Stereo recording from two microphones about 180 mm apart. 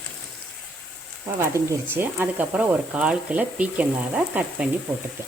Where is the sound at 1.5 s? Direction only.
15° right (ahead or behind).